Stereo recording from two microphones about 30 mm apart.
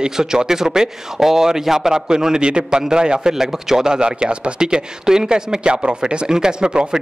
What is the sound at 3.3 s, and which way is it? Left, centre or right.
Speech, centre.